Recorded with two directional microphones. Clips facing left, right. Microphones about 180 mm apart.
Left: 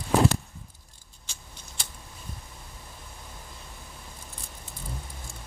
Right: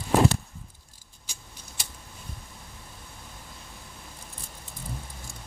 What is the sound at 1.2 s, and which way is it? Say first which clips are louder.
Vehicle: even; 10° right (ahead or behind).